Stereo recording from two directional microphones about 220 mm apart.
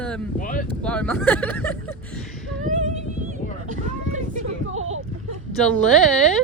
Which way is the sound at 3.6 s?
35° right (ahead or behind).